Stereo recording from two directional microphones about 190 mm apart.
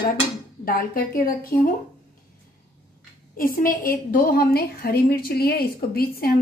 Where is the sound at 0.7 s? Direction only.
50° left (ahead or behind).